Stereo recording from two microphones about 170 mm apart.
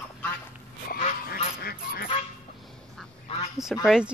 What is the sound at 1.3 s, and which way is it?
Goose, 65° left (ahead or behind).